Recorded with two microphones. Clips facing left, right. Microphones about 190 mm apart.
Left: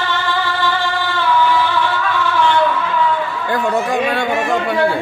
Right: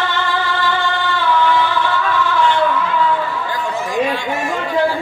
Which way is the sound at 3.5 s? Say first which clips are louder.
Left 5 dB; 65° left (ahead or behind).